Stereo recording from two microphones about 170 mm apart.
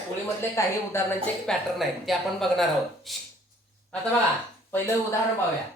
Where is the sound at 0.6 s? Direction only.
15° left (ahead or behind).